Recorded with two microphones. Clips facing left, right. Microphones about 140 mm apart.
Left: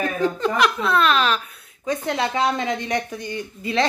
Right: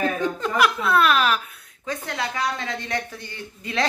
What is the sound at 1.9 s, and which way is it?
A woman's voice, 20° left (ahead or behind).